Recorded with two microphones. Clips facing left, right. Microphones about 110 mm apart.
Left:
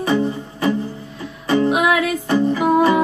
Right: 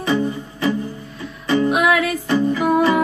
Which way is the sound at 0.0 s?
35° left (ahead or behind).